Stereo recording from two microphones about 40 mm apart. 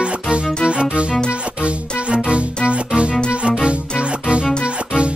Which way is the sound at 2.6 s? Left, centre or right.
Right.